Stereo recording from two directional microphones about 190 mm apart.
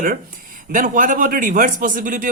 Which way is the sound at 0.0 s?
45° right (ahead or behind).